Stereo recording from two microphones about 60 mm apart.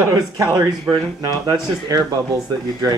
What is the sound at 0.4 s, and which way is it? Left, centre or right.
Speech, right.